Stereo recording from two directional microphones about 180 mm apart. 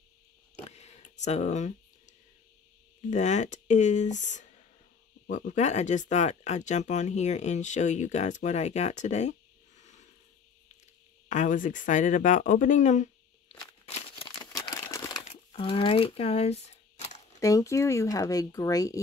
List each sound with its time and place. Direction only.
0.7 s a sound: 35° left (ahead or behind)
3.1 s speech: 40° left (ahead or behind)
9.8 s a sound: 40° left (ahead or behind)
11.2 s speech: 45° left (ahead or behind)
14.4 s crumpling: 20° left (ahead or behind)
15.5 s speech: 30° left (ahead or behind)
17.4 s speech: 20° left (ahead or behind)